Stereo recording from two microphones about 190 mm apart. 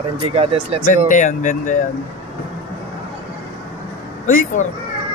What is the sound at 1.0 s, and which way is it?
Speech, 40° left (ahead or behind).